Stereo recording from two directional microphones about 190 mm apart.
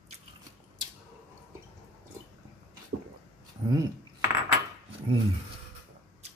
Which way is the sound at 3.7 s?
15° right (ahead or behind).